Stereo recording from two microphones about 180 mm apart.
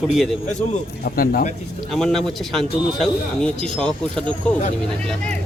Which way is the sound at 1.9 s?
Centre (ahead or behind).